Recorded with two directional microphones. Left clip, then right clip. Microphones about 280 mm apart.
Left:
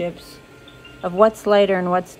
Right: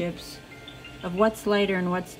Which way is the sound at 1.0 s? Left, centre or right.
Centre.